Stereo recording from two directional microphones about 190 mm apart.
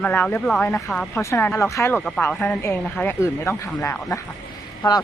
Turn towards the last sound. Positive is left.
turn(degrees=20)  # may be behind; listen again after turning